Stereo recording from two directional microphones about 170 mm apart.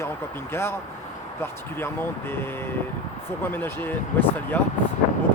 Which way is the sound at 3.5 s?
10° left (ahead or behind).